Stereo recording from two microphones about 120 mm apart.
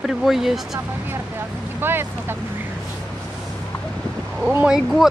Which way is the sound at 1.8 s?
20° right (ahead or behind).